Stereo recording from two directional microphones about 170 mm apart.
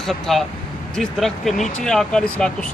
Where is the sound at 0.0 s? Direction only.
Centre (ahead or behind).